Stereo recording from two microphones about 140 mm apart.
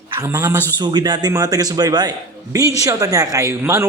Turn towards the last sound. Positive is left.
turn(degrees=-20)  # may be behind; listen again after turning